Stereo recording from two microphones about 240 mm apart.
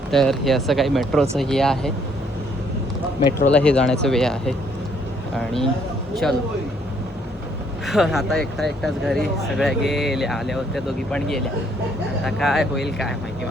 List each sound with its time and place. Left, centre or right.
0.1 s speech: centre
3.5 s speech: centre
6.2 s speech: centre
7.9 s speech: centre